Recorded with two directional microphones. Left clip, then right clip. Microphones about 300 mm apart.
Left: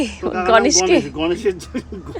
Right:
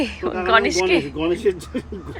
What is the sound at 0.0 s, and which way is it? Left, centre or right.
Speech, centre.